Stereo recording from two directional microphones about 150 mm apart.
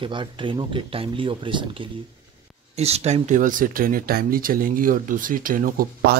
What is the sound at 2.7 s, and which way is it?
Speech, 45° right (ahead or behind).